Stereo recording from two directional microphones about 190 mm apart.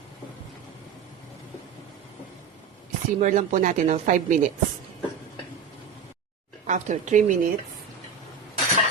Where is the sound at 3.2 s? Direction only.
40° right (ahead or behind).